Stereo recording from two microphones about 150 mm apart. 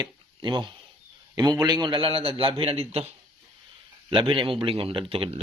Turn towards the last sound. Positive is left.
turn(degrees=-40)  # may be behind; listen again after turning